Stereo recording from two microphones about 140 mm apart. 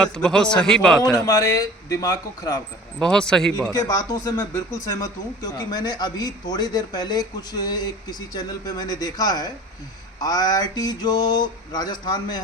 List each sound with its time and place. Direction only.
0.0 s a man's voice: 5° left (ahead or behind)
1.1 s speech: 25° left (ahead or behind)
3.0 s a man's voice: 5° left (ahead or behind)
3.7 s speech: 30° left (ahead or behind)